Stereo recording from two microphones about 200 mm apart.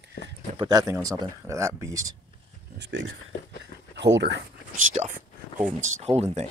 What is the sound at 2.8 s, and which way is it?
Speech, 65° right (ahead or behind).